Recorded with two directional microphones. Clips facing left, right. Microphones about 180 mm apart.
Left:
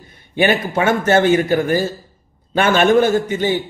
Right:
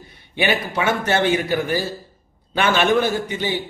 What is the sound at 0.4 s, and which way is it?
A man's voice, 45° left (ahead or behind).